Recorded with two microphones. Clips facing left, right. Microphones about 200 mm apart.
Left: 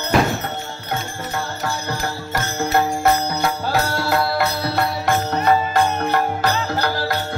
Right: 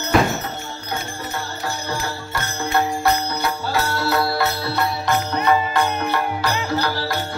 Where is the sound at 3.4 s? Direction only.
45° left (ahead or behind).